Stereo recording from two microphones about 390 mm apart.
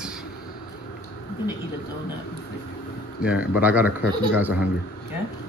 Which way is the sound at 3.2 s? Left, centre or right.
Centre.